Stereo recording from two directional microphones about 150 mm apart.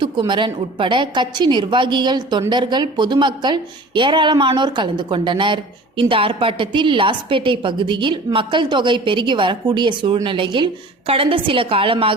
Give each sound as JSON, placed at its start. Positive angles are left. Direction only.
{"t": 0.0, "sound": "a woman's voice", "side_deg": -30}